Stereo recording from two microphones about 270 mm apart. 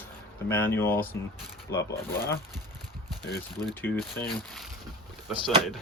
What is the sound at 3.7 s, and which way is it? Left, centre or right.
Speech, centre.